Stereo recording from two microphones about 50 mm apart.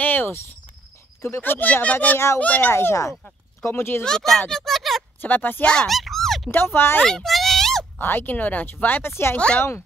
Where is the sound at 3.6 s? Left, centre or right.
Left.